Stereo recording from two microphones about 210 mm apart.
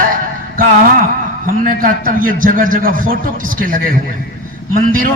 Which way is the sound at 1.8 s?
40° right (ahead or behind).